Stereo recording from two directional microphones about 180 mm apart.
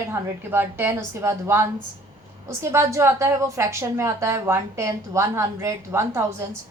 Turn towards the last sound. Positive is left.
turn(degrees=-15)  # may be behind; listen again after turning